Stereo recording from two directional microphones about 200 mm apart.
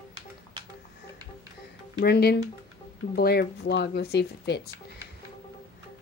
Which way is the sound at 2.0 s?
55° left (ahead or behind).